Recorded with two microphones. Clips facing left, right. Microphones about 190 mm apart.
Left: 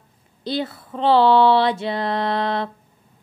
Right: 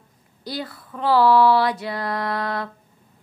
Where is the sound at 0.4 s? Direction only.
25° left (ahead or behind).